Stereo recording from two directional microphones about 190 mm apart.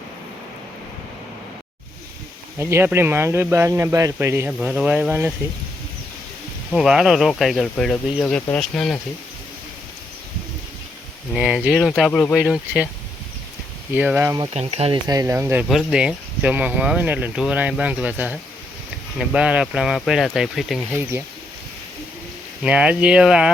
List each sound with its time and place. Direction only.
2.6 s speech: 15° right (ahead or behind)
6.7 s speech: 5° right (ahead or behind)
11.3 s speech: 5° right (ahead or behind)
13.9 s speech: 10° right (ahead or behind)
14.5 s speech: 30° right (ahead or behind)
15.0 s speech: 20° right (ahead or behind); by 21.0 s centre (ahead or behind)
22.6 s speech: 5° right (ahead or behind)